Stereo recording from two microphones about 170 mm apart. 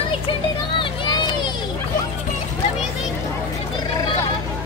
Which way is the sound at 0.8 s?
25° left (ahead or behind).